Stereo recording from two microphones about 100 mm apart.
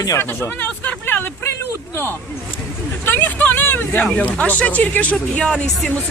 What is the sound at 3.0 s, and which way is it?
Vehicle, 20° left (ahead or behind).